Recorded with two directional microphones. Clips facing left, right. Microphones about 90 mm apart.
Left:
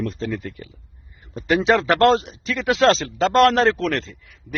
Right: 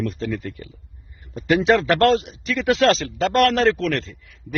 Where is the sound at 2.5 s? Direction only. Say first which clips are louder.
Even; 20° left (ahead or behind).